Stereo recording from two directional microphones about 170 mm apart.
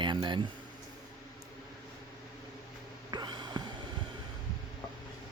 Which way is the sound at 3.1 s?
25° right (ahead or behind).